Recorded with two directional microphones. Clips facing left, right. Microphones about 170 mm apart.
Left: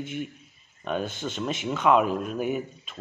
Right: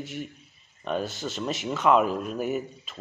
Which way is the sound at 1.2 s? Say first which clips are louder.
Left 1 dB; centre (ahead or behind).